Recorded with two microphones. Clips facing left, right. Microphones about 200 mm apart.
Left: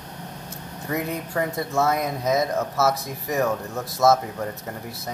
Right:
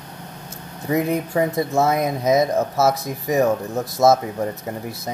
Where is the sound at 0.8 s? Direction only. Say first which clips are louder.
Right 7 dB; 20° right (ahead or behind).